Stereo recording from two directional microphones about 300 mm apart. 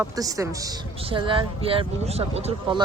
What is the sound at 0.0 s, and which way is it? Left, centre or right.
Speech, centre.